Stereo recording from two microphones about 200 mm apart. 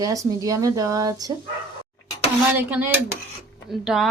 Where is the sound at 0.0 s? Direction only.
15° right (ahead or behind).